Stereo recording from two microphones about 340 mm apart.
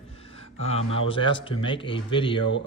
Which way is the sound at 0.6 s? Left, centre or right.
Centre.